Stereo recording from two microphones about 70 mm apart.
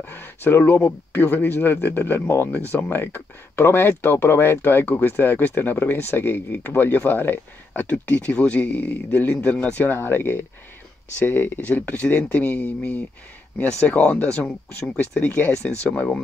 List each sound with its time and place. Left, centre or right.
0.0 s speech: left
9.9 s speech: left